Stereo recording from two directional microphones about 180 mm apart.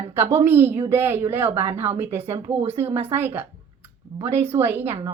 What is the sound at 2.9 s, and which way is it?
Speech, 10° right (ahead or behind).